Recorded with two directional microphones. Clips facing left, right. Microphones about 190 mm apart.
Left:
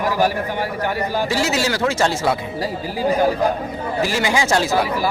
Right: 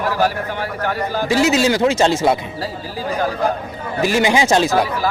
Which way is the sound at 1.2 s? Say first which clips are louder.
Right 9 dB; 20° right (ahead or behind).